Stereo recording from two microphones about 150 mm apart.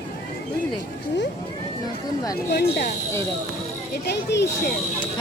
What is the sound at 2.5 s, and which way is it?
Speech, 90° left.